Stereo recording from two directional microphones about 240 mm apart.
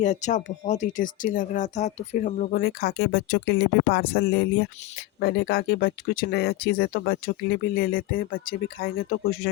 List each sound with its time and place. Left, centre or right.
0.0 s speech: left